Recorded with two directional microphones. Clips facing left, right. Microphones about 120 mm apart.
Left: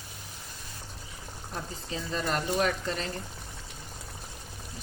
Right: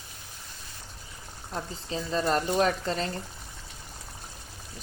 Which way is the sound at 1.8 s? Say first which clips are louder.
Right 5 dB; 35° right (ahead or behind).